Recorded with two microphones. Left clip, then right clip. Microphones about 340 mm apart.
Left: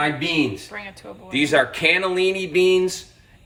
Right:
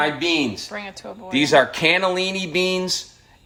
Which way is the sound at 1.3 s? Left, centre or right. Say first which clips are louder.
Right 2 dB; right.